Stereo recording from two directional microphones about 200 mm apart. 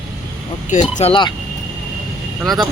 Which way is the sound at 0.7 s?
35° left (ahead or behind).